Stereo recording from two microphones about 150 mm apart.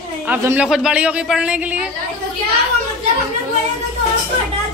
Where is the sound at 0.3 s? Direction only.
15° right (ahead or behind).